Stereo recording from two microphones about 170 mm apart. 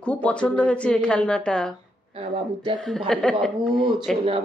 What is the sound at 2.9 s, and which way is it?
Speech, 5° left (ahead or behind).